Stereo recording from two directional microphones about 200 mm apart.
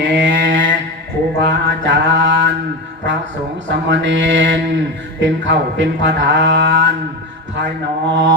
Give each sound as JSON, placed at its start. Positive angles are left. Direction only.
{"t": 0.0, "sound": "a sound", "side_deg": -65}
{"t": 1.4, "sound": "mantra", "side_deg": -65}
{"t": 3.7, "sound": "speech", "side_deg": -65}
{"t": 8.1, "sound": "speech", "side_deg": -60}